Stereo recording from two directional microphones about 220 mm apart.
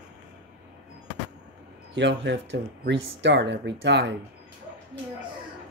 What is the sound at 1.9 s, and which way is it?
Speech, 55° right (ahead or behind).